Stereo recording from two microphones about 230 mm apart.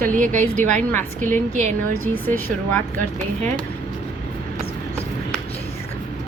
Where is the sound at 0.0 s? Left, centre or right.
Right.